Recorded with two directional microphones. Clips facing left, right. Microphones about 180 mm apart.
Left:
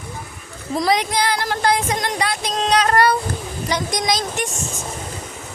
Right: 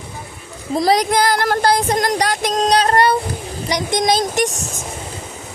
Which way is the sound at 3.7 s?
15° right (ahead or behind).